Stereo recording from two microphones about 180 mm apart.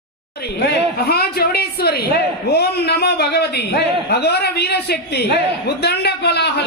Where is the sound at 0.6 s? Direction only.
60° left (ahead or behind).